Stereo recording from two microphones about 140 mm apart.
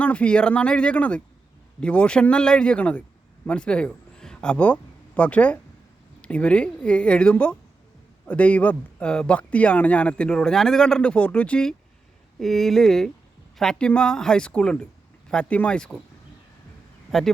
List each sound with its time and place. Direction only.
0.0 s a man's voice: 10° left (ahead or behind)
17.1 s speech: centre (ahead or behind)